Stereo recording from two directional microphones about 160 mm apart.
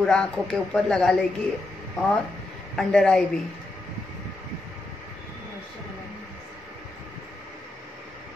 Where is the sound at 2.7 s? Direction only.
5° left (ahead or behind).